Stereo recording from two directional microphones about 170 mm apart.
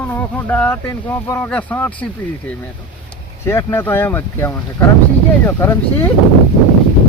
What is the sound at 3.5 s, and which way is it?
Speech, 15° left (ahead or behind).